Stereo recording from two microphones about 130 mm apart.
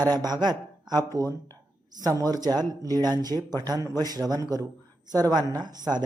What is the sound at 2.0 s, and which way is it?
A man's voice, 25° right (ahead or behind).